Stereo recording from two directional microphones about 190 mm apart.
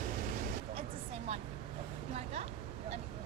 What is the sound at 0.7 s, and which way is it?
Vehicle, 35° right (ahead or behind).